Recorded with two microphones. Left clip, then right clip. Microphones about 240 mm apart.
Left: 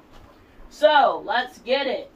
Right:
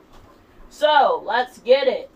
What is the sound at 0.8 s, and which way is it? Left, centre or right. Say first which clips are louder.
Speech: right 1 dB; right.